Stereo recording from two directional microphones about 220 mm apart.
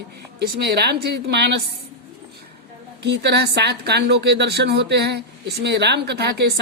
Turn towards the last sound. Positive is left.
turn(degrees=-50)  # may be behind; listen again after turning